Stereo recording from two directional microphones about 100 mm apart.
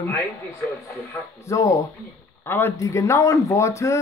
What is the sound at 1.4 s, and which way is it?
Speech, 30° left (ahead or behind).